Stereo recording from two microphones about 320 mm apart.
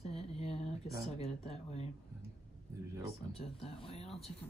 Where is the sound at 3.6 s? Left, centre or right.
Centre.